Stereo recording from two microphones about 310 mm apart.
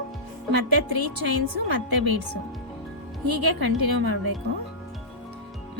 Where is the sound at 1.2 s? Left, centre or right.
Right.